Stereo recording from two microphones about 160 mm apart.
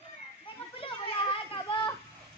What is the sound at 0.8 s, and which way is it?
Speech, 35° left (ahead or behind).